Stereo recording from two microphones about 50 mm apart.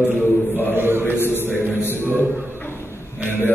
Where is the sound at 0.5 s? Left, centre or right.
Left.